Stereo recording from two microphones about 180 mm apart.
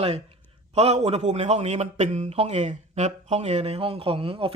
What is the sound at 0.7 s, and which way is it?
A man's voice, 35° right (ahead or behind).